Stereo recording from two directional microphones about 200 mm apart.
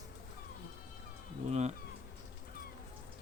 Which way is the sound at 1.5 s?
35° right (ahead or behind).